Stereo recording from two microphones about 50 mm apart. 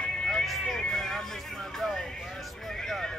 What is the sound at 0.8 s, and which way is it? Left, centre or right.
Music, centre.